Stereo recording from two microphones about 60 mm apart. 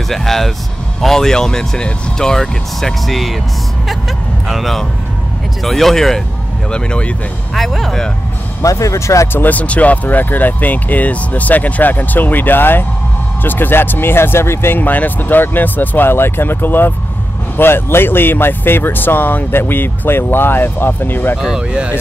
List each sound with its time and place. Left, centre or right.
0.1 s speech: centre
4.5 s speech: centre
6.7 s speech: centre
7.5 s speech: centre
8.6 s speech: left
9.3 s speech: left
21.4 s speech: centre